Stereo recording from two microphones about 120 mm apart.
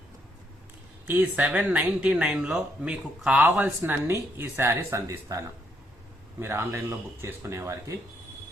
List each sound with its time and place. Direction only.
1.0 s speech: 15° right (ahead or behind)
6.4 s speech: 20° right (ahead or behind)